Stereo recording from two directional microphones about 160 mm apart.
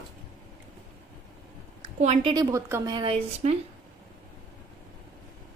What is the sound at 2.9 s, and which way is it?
Speech, 35° right (ahead or behind).